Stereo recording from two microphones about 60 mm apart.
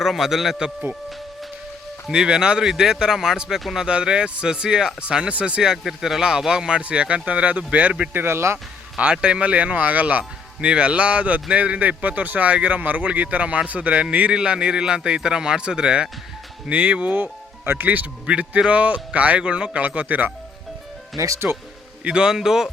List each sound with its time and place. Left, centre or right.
0.0 s a man's voice: centre
2.0 s a man's voice: centre
3.8 s speech: centre
8.1 s speech: right
9.0 s speech: centre
21.2 s speech: right
22.0 s speech: centre